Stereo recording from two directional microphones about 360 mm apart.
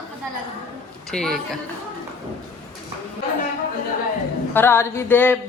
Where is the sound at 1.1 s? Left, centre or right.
Centre.